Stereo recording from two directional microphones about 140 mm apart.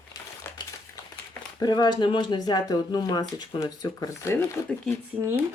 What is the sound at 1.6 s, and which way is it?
Speech, 30° left (ahead or behind).